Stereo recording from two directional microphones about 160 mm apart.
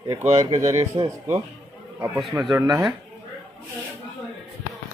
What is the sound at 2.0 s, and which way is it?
Speech, centre (ahead or behind).